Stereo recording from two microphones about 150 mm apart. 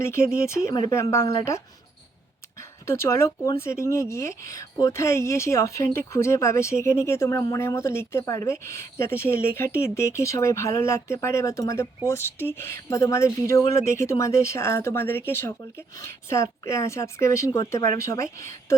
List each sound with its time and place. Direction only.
0.0 s speech: 15° left (ahead or behind)